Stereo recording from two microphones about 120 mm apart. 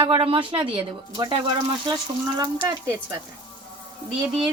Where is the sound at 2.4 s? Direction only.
25° right (ahead or behind).